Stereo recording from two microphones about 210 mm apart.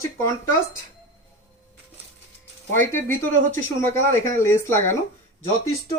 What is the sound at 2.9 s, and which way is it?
Speech, 10° left (ahead or behind).